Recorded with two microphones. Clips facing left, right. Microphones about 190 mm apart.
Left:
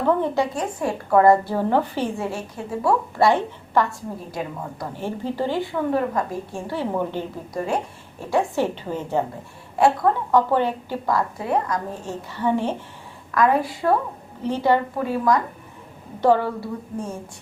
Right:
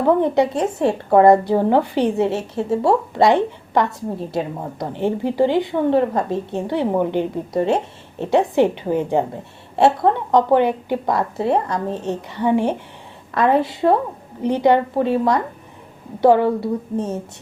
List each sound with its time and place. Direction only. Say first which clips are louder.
0.0 s a woman's voice: right 5 dB; 20° right (ahead or behind)
9.7 s a woman's voice: right 3 dB; 25° right (ahead or behind)
13.3 s a woman's voice: right 3 dB; 25° right (ahead or behind)
14.9 s a woman's voice: right 3 dB; 25° right (ahead or behind)
16.2 s a woman's voice: right 5 dB; 15° right (ahead or behind)